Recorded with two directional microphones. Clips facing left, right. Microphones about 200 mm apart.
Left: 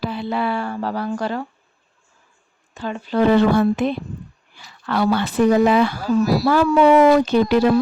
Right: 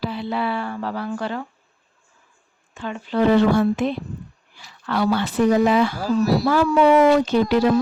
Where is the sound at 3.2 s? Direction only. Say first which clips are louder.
Left 1 dB; 60° left (ahead or behind).